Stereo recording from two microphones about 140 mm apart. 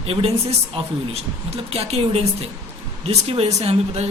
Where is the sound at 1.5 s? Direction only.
45° right (ahead or behind).